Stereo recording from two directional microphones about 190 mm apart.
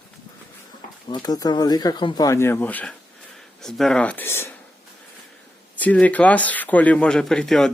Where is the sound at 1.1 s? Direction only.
20° left (ahead or behind).